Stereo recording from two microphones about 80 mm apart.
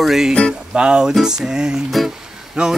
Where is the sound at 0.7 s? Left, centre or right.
Centre.